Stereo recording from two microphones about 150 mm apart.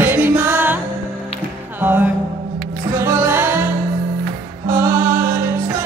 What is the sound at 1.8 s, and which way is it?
Music, 10° right (ahead or behind).